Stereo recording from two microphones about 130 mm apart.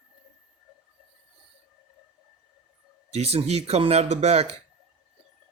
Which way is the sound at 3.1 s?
55° right (ahead or behind).